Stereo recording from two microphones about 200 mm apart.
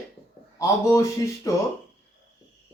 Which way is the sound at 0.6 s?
15° left (ahead or behind).